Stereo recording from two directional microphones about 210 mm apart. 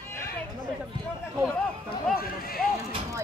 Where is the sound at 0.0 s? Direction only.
10° left (ahead or behind).